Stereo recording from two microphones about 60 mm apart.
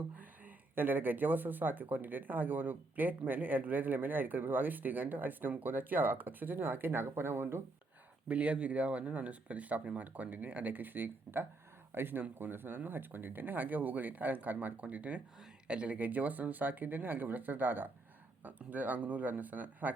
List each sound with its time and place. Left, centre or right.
0.2 s speech: right
8.3 s speech: right